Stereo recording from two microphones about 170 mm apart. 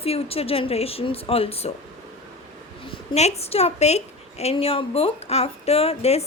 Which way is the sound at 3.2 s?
40° left (ahead or behind).